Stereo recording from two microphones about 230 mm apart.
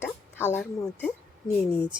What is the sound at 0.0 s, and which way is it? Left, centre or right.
A woman's voice, centre.